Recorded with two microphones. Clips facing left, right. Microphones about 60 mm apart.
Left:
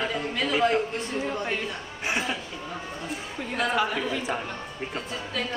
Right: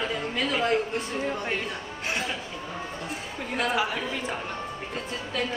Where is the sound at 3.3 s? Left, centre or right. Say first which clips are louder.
Left 1 dB; centre.